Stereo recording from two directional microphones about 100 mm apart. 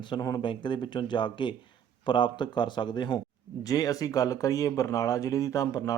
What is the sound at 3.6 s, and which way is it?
Speech, 35° left (ahead or behind).